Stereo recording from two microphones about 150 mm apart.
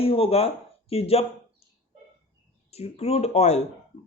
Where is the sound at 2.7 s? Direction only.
45° left (ahead or behind).